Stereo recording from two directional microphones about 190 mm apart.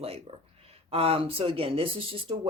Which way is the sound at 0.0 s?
30° right (ahead or behind).